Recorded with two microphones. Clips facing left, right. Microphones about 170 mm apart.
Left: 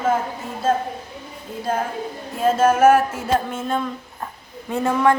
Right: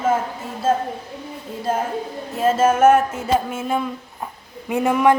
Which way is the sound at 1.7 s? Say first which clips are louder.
Right 1 dB; 5° right (ahead or behind).